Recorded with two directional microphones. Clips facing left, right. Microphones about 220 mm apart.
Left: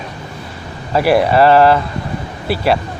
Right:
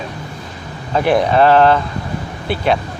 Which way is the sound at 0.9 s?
5° left (ahead or behind).